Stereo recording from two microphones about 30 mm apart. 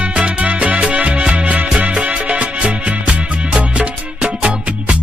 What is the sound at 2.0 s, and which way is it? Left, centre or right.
Music, right.